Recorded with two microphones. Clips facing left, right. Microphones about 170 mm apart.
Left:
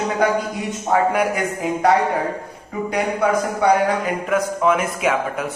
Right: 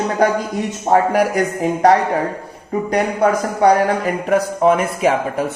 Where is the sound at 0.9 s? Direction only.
40° right (ahead or behind).